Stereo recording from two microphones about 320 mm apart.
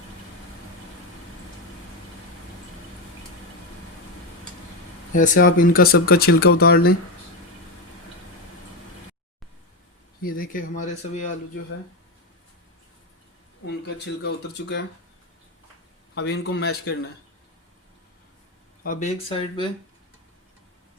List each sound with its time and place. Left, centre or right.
5.1 s speech: left
10.2 s speech: left
13.7 s speech: left
16.1 s speech: left
18.8 s speech: left